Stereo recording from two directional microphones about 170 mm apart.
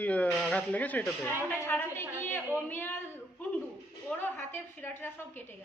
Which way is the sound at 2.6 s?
15° left (ahead or behind).